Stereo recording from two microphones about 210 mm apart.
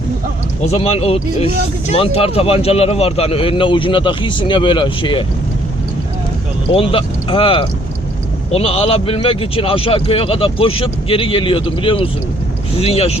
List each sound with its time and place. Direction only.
0.6 s speech: 30° left (ahead or behind)
6.7 s speech: 25° left (ahead or behind)